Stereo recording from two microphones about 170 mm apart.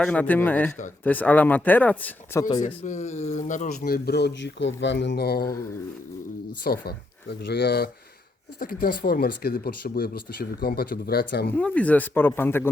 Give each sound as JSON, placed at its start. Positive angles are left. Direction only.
{"t": 0.0, "sound": "speech", "side_deg": 10}
{"t": 2.4, "sound": "speech", "side_deg": 25}
{"t": 2.8, "sound": "speech", "side_deg": 45}
{"t": 6.7, "sound": "speech", "side_deg": 70}
{"t": 11.5, "sound": "speech", "side_deg": 10}